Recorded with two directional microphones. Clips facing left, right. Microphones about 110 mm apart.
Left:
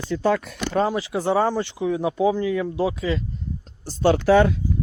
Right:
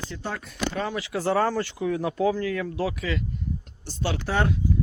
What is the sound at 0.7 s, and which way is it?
Speech, 35° left (ahead or behind).